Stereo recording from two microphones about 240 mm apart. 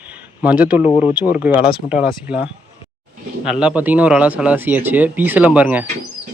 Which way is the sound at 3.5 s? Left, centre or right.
Centre.